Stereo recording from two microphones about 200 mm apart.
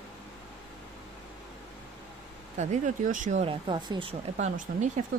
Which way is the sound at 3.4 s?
25° right (ahead or behind).